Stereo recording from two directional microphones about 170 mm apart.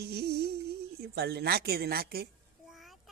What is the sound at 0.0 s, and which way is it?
Humming, 70° right (ahead or behind).